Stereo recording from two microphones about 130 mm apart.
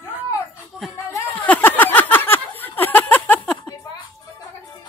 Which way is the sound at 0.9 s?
15° left (ahead or behind).